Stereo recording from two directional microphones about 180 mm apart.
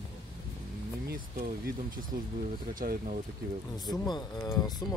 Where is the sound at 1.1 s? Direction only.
55° right (ahead or behind).